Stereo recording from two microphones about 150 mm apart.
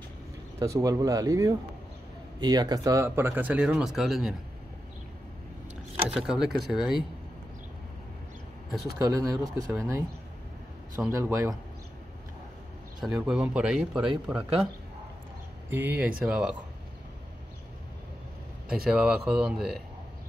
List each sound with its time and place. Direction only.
0.6 s speech: 20° right (ahead or behind); by 4.4 s 5° right (ahead or behind)
6.0 s speech: 5° right (ahead or behind)
8.9 s speech: 20° right (ahead or behind)
11.1 s speech: 20° right (ahead or behind)
13.0 s speech: centre (ahead or behind)
15.7 s speech: 10° right (ahead or behind)
18.9 s speech: 5° right (ahead or behind)